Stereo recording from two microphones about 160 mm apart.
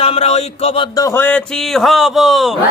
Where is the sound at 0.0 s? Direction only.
40° left (ahead or behind).